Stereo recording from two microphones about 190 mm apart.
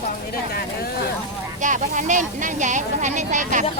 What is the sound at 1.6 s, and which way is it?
Speech, 40° right (ahead or behind).